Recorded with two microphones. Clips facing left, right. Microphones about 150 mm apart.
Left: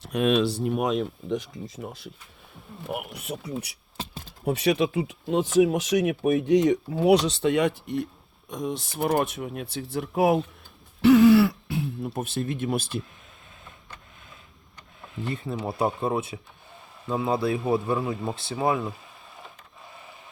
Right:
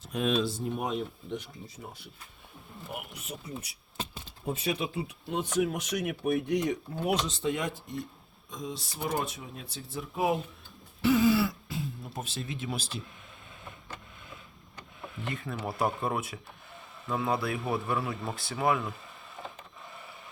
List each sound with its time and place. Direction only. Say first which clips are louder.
0.0 s speech: left 6 dB; 70° left (ahead or behind); by 2.0 s 90° left
2.9 s speech: left 8 dB; 70° left (ahead or behind); by 13.0 s 55° left (ahead or behind)
15.3 s a man's voice: left 5 dB; 30° left (ahead or behind)